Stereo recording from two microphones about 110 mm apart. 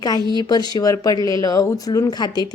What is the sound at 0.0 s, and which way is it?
A woman's voice, 40° left (ahead or behind).